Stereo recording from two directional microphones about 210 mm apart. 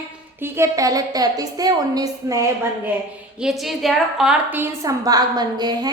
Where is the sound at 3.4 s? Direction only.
Centre (ahead or behind).